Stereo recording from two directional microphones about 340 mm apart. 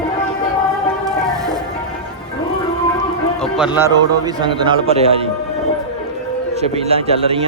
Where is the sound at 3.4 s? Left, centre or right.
Centre.